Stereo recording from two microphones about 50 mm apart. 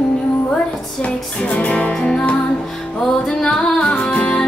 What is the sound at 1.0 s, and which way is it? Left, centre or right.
Music, left.